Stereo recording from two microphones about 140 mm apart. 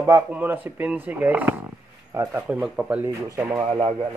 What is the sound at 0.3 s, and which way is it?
Speech, 10° right (ahead or behind).